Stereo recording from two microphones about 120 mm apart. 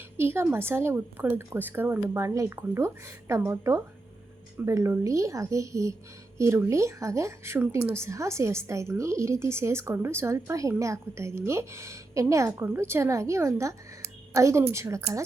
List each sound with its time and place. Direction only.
0.2 s speech: 20° right (ahead or behind)